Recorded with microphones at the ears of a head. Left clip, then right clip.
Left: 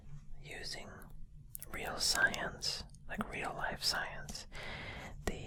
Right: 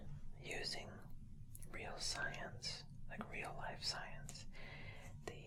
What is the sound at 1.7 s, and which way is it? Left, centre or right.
Whispering, left.